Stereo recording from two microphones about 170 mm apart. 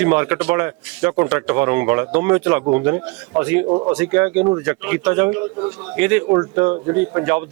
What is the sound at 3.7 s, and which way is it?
Speech, 30° right (ahead or behind).